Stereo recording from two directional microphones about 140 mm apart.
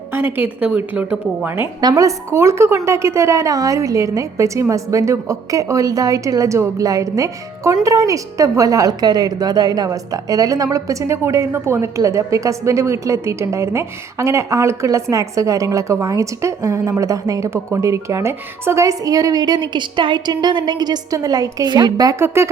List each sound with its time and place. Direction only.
0.1 s a woman's voice: 15° right (ahead or behind)
1.8 s a woman's voice: 25° right (ahead or behind)